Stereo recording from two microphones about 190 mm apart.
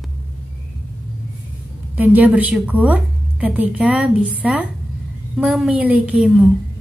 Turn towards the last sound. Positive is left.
turn(degrees=0)  # may be behind; listen again after turning